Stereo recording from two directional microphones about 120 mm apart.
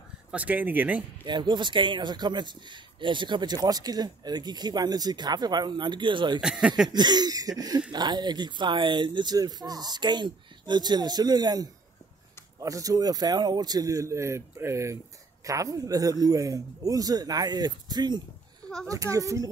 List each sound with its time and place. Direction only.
0.3 s speech: 10° right (ahead or behind)
1.2 s speech: 40° right (ahead or behind)
6.4 s speech: 5° right (ahead or behind)
6.9 s speech: 35° right (ahead or behind)